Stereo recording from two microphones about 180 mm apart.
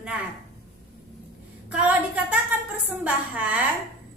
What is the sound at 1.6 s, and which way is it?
A woman's voice, 10° right (ahead or behind).